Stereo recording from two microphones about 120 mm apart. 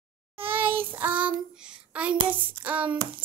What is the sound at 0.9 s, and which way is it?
Hands, 15° right (ahead or behind).